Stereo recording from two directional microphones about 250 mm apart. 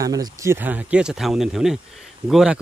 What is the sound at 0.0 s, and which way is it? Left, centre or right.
A man's voice, centre.